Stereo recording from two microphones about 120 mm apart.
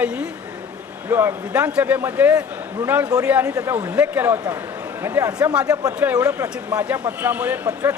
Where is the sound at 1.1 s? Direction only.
20° right (ahead or behind).